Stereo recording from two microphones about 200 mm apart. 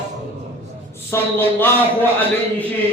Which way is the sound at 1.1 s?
15° left (ahead or behind).